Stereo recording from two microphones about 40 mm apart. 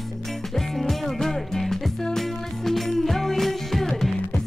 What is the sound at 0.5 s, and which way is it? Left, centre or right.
Music, centre.